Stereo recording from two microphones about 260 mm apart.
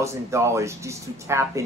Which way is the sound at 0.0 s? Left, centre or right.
Centre.